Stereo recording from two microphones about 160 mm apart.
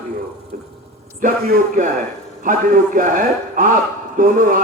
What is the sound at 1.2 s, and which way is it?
A man's voice, 65° right (ahead or behind).